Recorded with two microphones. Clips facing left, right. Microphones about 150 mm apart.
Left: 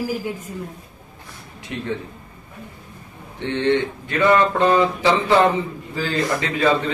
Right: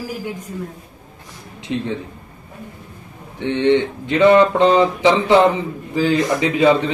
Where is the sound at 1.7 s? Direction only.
20° right (ahead or behind).